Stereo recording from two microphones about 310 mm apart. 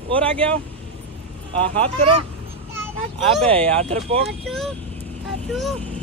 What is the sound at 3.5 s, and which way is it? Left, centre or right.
Speech, centre.